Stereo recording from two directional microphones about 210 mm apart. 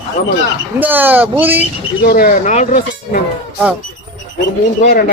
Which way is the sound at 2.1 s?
45° left (ahead or behind).